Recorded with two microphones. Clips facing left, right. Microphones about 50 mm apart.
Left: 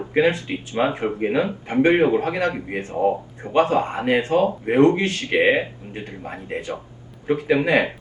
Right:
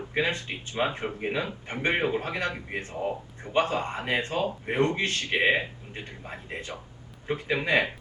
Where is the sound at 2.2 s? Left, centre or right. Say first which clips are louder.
Left 8 dB; left.